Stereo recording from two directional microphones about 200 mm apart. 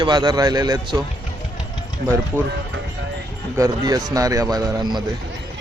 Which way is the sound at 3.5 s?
15° right (ahead or behind).